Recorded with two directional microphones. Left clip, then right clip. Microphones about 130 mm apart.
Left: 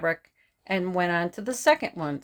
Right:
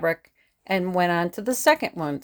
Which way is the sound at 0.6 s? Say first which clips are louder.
Right 4 dB; 40° right (ahead or behind).